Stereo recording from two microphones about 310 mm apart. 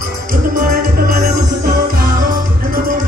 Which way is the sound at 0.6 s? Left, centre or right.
Right.